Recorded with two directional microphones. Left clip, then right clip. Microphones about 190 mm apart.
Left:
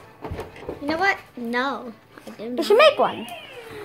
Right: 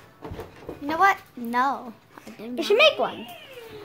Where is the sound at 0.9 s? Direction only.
30° right (ahead or behind).